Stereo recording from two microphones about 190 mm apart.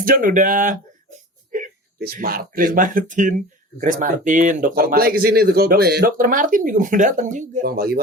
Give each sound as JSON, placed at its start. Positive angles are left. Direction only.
{"t": 0.0, "sound": "speech", "side_deg": -45}